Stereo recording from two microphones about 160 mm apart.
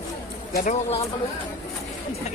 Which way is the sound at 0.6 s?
40° left (ahead or behind).